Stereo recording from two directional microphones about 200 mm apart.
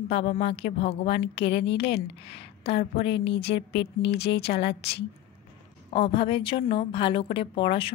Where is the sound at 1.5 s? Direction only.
65° left (ahead or behind).